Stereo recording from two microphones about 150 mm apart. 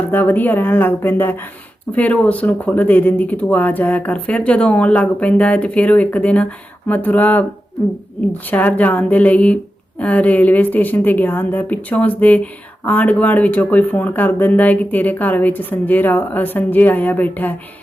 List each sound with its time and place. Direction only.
0.1 s a woman's voice: 10° left (ahead or behind)